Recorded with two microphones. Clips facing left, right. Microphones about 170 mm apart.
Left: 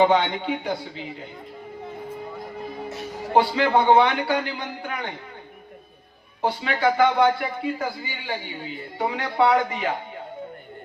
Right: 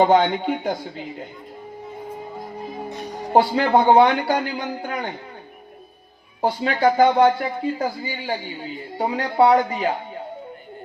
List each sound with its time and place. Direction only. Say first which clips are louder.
0.0 s speech: right 3 dB; 45° right (ahead or behind)
3.3 s speech: right 3 dB; 40° right (ahead or behind)
6.4 s speech: right 3 dB; 40° right (ahead or behind)